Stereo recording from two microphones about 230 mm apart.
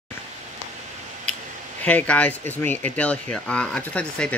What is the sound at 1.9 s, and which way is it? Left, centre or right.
Speech, centre.